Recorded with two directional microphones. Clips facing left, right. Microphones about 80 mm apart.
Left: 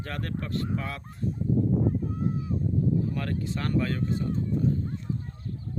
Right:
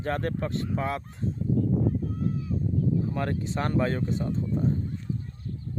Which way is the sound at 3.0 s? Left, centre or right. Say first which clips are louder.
Right 1 dB; right.